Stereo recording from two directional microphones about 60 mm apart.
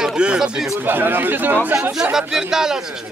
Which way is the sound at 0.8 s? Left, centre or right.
Right.